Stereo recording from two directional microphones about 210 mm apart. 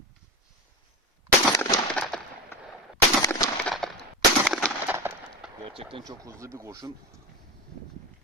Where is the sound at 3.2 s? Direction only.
15° left (ahead or behind).